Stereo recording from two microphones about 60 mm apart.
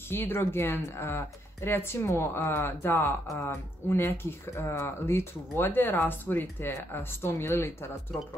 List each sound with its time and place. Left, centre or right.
0.1 s speech: left